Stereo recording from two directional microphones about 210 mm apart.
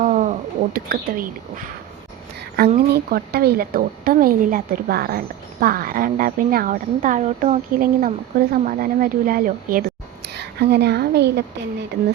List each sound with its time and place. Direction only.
0.0 s a woman's voice: 35° right (ahead or behind)
10.2 s a woman's voice: 50° right (ahead or behind)